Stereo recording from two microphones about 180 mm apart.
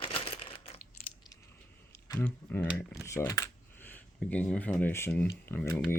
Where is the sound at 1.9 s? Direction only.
15° left (ahead or behind).